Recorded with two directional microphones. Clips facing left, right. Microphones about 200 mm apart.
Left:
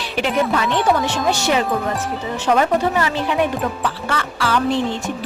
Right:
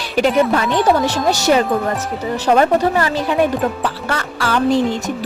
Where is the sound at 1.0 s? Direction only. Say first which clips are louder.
Right 4 dB; 40° right (ahead or behind).